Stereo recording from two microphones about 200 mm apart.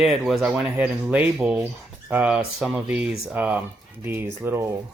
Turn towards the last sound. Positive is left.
turn(degrees=-15)  # may be behind; listen again after turning